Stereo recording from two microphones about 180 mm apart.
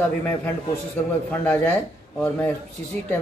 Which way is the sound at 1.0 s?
10° left (ahead or behind).